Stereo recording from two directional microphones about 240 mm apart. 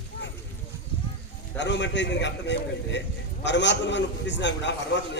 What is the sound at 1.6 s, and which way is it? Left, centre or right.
A man's voice, left.